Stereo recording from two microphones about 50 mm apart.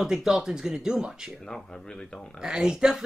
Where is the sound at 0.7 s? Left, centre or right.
Right.